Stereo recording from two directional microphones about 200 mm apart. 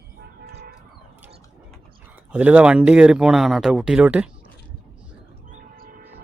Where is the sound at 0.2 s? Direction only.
50° right (ahead or behind).